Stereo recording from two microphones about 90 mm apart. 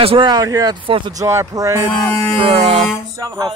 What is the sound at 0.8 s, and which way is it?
Speech, 75° right (ahead or behind).